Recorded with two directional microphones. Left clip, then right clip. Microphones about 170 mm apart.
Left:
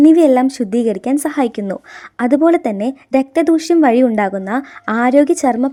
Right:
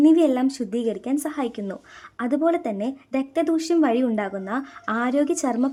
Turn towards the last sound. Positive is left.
turn(degrees=30)  # may be behind; listen again after turning